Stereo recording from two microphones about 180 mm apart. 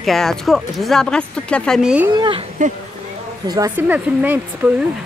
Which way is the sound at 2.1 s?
25° right (ahead or behind).